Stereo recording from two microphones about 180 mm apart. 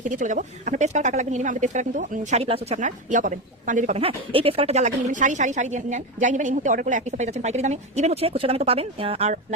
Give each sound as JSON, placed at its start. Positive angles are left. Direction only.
{"t": 0.0, "sound": "speech", "side_deg": -45}